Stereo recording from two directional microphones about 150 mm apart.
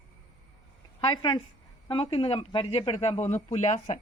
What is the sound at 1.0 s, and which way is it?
Speech, 30° left (ahead or behind).